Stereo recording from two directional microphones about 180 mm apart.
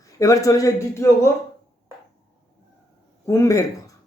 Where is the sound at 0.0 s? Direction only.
20° left (ahead or behind).